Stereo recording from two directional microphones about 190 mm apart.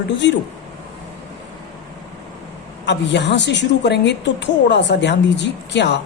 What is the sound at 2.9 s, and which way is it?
A woman's voice, 65° left (ahead or behind).